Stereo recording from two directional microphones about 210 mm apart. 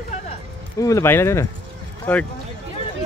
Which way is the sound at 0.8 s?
15° left (ahead or behind).